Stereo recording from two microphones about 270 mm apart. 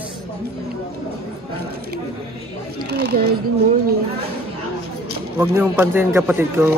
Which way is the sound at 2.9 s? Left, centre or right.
Right.